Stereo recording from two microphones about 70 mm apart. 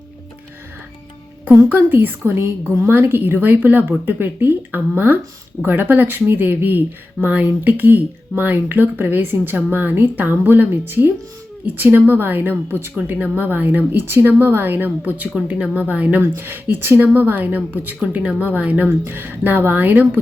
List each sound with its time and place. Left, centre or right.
1.7 s speech: right
16.2 s speech: right